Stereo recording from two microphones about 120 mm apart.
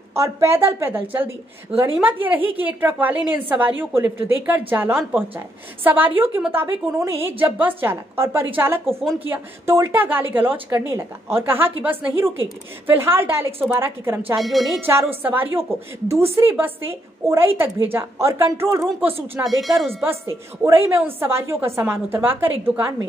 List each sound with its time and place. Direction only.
0.1 s a woman's voice: 25° right (ahead or behind)
14.4 s speech: centre (ahead or behind)
14.9 s a woman's voice: 20° right (ahead or behind)
19.6 s speech: centre (ahead or behind)
20.6 s a woman's voice: 20° right (ahead or behind)